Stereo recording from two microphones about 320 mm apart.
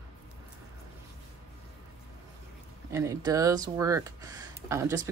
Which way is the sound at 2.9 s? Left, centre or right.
Centre.